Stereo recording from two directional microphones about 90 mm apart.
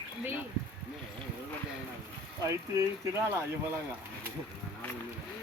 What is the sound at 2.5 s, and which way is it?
Speech, 35° right (ahead or behind).